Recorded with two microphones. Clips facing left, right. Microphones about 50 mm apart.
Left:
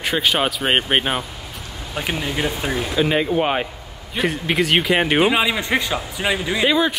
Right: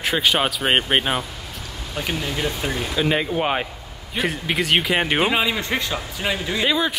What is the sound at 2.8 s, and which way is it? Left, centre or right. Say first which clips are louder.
Speech: left 2 dB; centre.